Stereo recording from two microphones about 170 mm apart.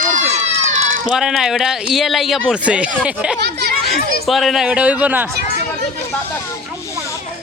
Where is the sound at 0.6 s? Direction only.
45° right (ahead or behind).